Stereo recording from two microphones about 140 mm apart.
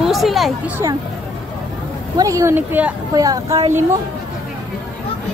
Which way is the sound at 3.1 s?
25° right (ahead or behind).